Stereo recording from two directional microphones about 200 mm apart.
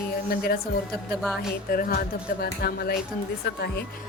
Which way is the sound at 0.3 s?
50° left (ahead or behind).